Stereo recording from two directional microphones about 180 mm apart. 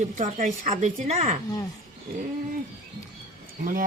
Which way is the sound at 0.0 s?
45° right (ahead or behind).